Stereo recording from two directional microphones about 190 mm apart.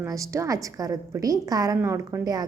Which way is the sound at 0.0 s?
15° right (ahead or behind).